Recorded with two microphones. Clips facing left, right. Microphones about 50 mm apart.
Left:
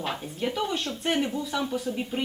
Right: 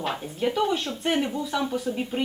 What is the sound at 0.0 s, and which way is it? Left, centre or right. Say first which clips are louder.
Speech: right 3 dB; centre.